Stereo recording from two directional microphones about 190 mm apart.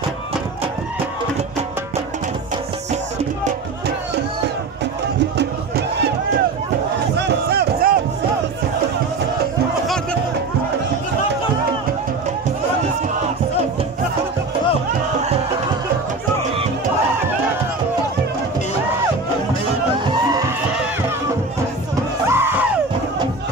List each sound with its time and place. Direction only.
5.4 s music: 65° right (ahead or behind)
7.2 s music: 60° right (ahead or behind)
22.3 s music: 10° right (ahead or behind)